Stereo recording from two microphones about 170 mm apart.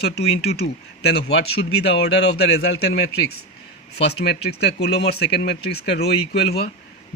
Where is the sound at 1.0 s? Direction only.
75° left (ahead or behind).